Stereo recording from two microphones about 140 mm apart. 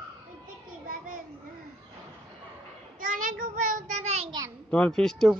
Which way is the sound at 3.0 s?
80° right.